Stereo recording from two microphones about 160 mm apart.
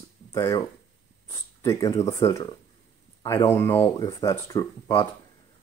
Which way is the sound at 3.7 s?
30° left (ahead or behind).